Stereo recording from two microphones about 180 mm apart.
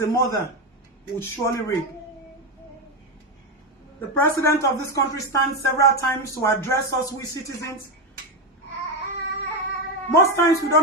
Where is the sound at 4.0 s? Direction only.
10° left (ahead or behind).